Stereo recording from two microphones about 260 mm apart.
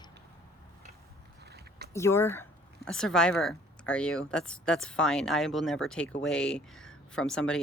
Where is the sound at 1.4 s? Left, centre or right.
Right.